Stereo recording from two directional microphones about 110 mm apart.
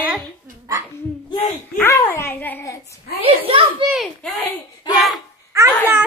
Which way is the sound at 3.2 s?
60° right (ahead or behind).